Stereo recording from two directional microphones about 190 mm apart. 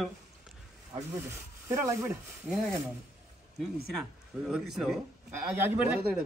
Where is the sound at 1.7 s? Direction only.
15° right (ahead or behind).